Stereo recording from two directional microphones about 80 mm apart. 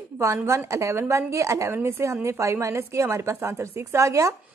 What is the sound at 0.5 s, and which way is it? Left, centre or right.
Speech, right.